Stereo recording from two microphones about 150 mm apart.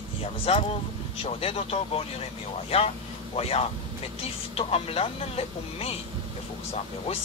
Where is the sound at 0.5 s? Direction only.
40° left (ahead or behind).